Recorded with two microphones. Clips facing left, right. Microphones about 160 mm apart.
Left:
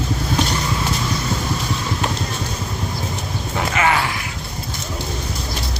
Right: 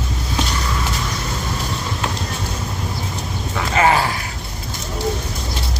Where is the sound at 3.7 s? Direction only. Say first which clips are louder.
Right 4 dB; 30° right (ahead or behind).